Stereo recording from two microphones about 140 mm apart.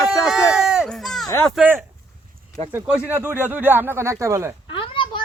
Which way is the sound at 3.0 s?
15° right (ahead or behind).